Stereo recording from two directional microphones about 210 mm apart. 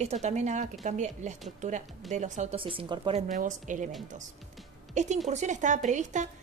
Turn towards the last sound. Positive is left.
turn(degrees=-35)  # may be behind; listen again after turning